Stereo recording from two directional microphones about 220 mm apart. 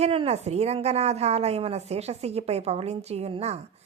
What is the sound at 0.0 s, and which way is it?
Speech, 25° right (ahead or behind).